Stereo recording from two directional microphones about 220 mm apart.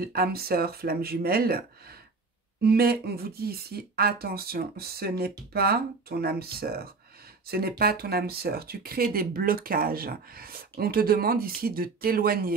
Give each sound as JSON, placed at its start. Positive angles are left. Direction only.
{"t": 0.0, "sound": "speech", "side_deg": -45}
{"t": 2.6, "sound": "speech", "side_deg": -45}